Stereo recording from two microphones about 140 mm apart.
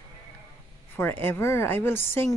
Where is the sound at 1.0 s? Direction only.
15° left (ahead or behind).